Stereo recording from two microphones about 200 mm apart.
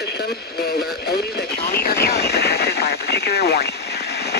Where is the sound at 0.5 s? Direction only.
55° left (ahead or behind).